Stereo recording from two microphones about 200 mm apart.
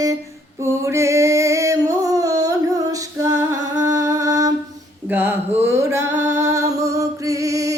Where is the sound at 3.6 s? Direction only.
20° right (ahead or behind).